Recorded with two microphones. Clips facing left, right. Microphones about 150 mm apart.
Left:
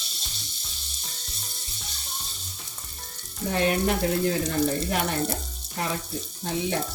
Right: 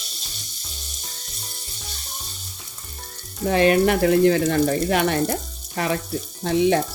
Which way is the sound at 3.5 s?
90° right.